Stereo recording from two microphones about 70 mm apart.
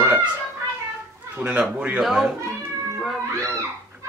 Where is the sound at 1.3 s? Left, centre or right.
Right.